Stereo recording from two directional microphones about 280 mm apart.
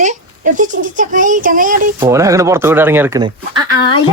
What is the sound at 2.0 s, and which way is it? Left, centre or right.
Speech, centre.